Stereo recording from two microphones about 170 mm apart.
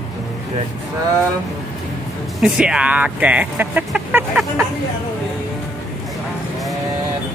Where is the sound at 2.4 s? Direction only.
5° right (ahead or behind).